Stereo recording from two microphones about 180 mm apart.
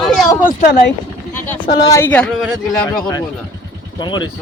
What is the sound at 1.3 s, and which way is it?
Speech, 10° left (ahead or behind).